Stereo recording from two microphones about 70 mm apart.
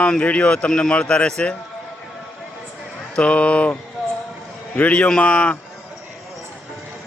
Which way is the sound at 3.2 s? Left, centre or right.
Centre.